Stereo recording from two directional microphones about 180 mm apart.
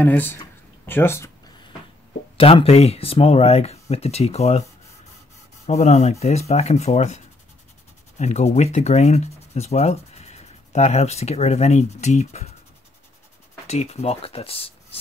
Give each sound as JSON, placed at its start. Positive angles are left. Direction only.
{"t": 0.0, "sound": "speech", "side_deg": 10}
{"t": 2.3, "sound": "speech", "side_deg": 30}
{"t": 5.7, "sound": "speech", "side_deg": 40}
{"t": 8.2, "sound": "speech", "side_deg": 40}
{"t": 13.7, "sound": "speech", "side_deg": 35}